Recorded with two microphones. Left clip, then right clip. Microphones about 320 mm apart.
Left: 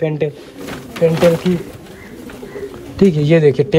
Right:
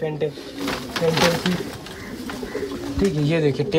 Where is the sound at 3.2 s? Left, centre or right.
Left.